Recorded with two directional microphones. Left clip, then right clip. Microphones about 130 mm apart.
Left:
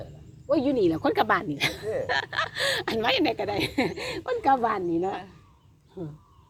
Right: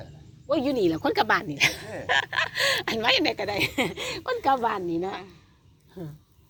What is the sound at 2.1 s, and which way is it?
Speech, 15° right (ahead or behind).